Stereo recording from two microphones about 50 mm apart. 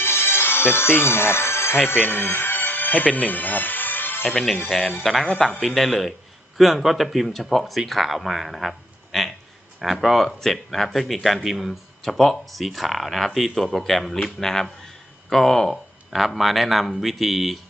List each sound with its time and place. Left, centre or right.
0.0 s music: left
1.9 s speech: left
4.3 s speech: centre
9.1 s a sound: centre
9.8 s speech: centre